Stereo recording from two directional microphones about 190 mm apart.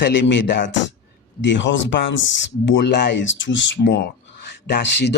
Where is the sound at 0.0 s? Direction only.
75° left (ahead or behind).